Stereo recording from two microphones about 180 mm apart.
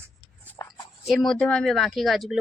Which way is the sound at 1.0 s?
Centre (ahead or behind).